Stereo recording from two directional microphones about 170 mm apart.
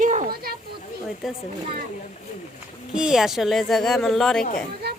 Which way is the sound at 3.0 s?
5° right (ahead or behind).